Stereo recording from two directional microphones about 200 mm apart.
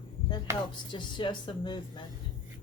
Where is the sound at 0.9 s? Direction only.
25° left (ahead or behind).